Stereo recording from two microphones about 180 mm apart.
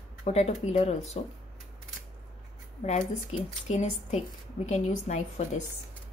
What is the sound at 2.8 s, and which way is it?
A woman's voice, 40° left (ahead or behind).